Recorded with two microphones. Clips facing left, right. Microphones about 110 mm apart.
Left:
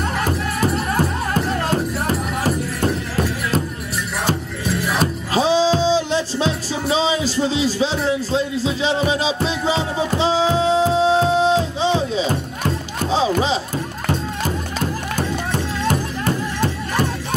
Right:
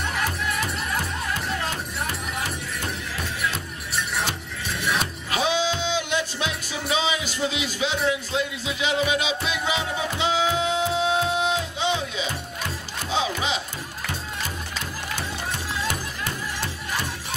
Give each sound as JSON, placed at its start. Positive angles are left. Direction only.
{"t": 0.0, "sound": "music", "side_deg": 45}
{"t": 4.9, "sound": "music", "side_deg": 35}
{"t": 14.0, "sound": "music", "side_deg": 45}